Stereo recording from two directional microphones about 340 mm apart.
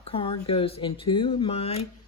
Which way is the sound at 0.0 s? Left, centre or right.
Centre.